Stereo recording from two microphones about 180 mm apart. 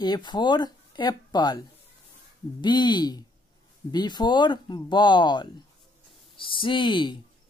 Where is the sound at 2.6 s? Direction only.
25° left (ahead or behind).